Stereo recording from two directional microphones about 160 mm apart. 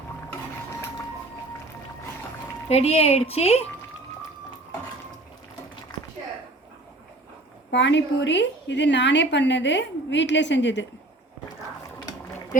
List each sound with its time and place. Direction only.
2.6 s speech: 40° left (ahead or behind)
7.7 s a woman's voice: 90° left